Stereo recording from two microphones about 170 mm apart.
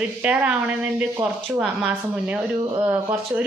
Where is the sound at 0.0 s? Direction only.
10° right (ahead or behind).